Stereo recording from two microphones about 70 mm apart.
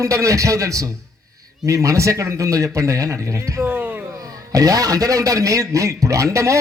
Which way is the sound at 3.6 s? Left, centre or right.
Right.